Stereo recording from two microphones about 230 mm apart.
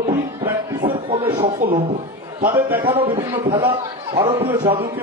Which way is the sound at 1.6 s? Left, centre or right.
Centre.